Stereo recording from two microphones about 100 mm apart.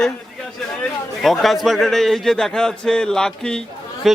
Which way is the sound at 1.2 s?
Centre (ahead or behind).